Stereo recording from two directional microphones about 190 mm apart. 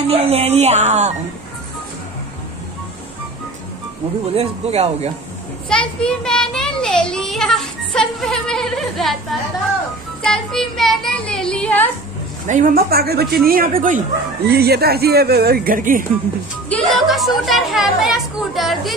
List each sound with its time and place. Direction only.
0.1 s speech: 30° right (ahead or behind)
4.3 s speech: 30° right (ahead or behind)
5.7 s a child's voice: 5° left (ahead or behind)
12.4 s speech: 45° right (ahead or behind)
16.6 s a child's voice: 5° left (ahead or behind)